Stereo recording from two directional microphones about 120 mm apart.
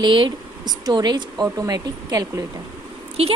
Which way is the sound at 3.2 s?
55° right (ahead or behind).